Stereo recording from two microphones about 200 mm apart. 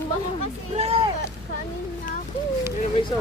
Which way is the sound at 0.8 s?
30° right (ahead or behind).